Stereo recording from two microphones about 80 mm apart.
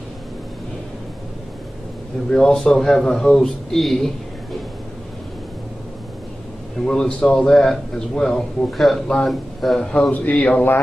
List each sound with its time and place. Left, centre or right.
2.3 s a man's voice: centre
6.8 s a man's voice: centre